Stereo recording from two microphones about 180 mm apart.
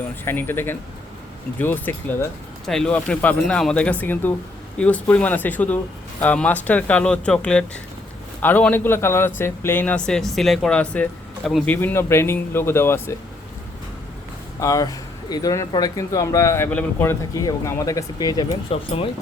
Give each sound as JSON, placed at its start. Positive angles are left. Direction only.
{"t": 0.3, "sound": "speech", "side_deg": 10}
{"t": 14.6, "sound": "speech", "side_deg": 20}
{"t": 18.7, "sound": "speech", "side_deg": 30}